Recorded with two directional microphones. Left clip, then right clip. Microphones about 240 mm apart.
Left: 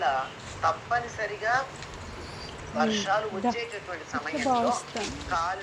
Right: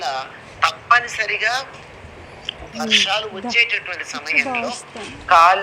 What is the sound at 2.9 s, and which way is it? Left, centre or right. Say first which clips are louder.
Speech: right 10 dB; right.